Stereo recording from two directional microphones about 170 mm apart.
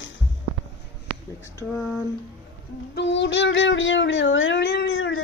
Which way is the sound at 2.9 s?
90° left.